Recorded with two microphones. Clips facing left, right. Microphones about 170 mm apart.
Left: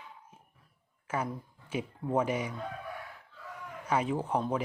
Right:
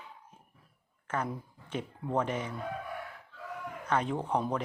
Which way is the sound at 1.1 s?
10° left (ahead or behind).